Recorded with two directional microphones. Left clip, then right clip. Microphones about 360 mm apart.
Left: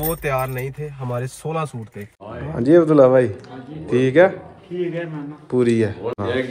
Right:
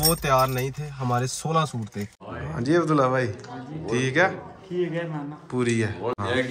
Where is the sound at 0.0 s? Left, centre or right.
Centre.